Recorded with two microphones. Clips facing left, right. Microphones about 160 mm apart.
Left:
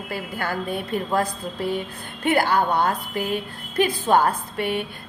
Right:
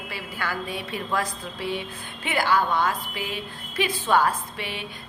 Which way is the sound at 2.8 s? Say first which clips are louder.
Left 4 dB; 55° left (ahead or behind).